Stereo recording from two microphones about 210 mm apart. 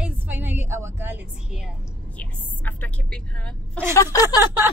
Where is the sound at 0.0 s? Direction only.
10° right (ahead or behind).